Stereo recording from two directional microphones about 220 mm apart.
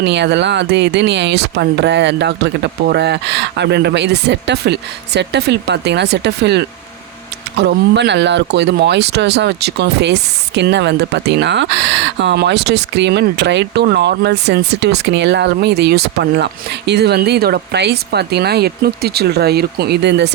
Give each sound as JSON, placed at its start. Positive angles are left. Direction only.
{"t": 0.0, "sound": "speech", "side_deg": -50}